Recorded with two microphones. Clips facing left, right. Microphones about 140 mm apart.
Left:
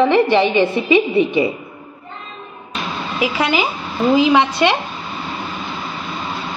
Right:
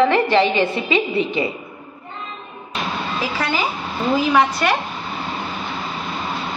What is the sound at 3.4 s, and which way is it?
A woman's voice, 15° left (ahead or behind).